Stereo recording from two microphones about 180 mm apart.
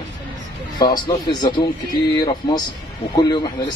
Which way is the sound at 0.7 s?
25° left (ahead or behind).